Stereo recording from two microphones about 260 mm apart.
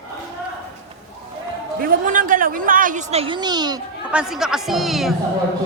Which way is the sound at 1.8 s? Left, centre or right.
Right.